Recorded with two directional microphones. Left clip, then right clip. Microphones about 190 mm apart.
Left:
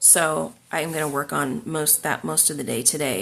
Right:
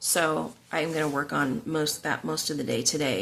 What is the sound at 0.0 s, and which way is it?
Speech, 25° left (ahead or behind).